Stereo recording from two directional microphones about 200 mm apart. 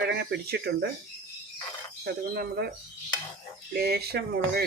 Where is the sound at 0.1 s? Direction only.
55° right (ahead or behind).